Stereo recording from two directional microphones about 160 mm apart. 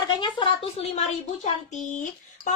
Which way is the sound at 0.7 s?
40° left (ahead or behind).